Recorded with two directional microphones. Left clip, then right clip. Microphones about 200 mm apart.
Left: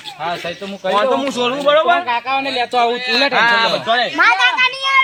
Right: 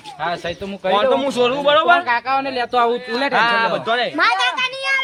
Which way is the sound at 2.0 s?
5° left (ahead or behind).